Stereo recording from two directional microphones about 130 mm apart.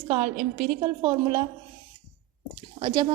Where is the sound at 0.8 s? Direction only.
35° right (ahead or behind).